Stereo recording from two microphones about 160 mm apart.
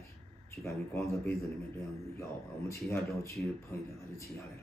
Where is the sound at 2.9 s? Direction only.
15° left (ahead or behind).